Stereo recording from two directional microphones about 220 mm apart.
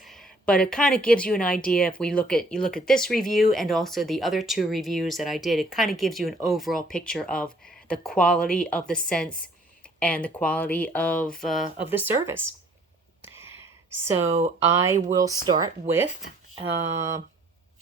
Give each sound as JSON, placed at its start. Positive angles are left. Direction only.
{"t": 0.0, "sound": "speech", "side_deg": 0}
{"t": 11.9, "sound": "speech", "side_deg": -10}
{"t": 13.2, "sound": "a sound", "side_deg": -10}
{"t": 14.7, "sound": "speech", "side_deg": -10}